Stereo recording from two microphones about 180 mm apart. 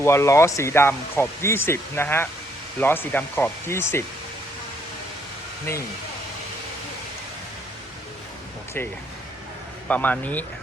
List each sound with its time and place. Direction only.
0.0 s speech: 15° left (ahead or behind)
9.9 s speech: 10° left (ahead or behind)